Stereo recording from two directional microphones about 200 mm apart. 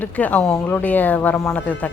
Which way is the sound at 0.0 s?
5° left (ahead or behind).